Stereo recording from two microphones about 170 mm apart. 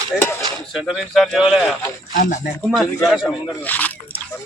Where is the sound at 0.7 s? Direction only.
Centre (ahead or behind).